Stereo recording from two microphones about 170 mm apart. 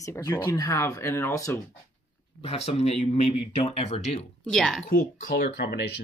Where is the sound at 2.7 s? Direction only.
40° left (ahead or behind).